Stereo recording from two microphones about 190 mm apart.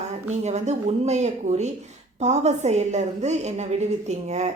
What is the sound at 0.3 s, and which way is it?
Speech, 35° right (ahead or behind).